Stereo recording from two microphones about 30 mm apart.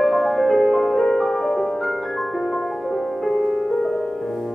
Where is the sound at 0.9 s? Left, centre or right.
Centre.